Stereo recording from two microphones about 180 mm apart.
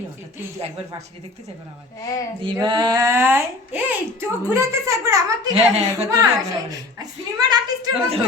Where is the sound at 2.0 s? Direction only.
20° left (ahead or behind).